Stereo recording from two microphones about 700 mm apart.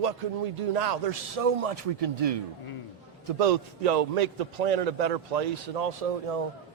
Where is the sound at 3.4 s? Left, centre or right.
Right.